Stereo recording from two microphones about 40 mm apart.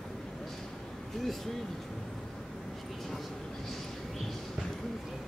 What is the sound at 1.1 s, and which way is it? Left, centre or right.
Speech, centre.